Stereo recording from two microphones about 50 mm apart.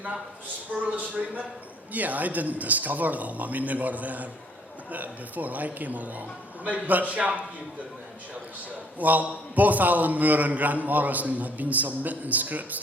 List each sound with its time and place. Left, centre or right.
0.9 s a man's voice: right
9.0 s a man's voice: right